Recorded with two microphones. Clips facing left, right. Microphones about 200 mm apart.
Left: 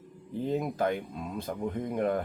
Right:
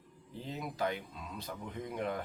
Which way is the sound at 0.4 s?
50° left (ahead or behind).